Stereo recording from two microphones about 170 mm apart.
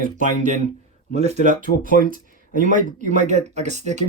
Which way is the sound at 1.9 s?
55° left (ahead or behind).